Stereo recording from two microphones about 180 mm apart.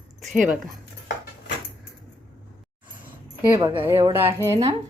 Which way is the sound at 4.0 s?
30° right (ahead or behind).